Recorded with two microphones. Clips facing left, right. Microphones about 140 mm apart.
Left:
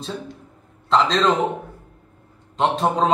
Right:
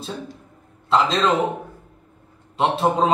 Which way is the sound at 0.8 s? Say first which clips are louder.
Left 1 dB; 5° right (ahead or behind).